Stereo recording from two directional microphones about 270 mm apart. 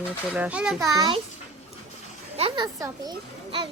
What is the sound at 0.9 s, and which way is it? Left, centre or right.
Speech, centre.